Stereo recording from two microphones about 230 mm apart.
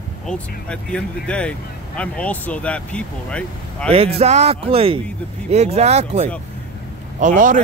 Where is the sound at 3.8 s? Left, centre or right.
Right.